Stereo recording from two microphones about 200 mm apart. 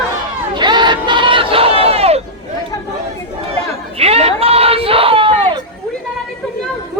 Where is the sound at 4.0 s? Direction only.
30° right (ahead or behind).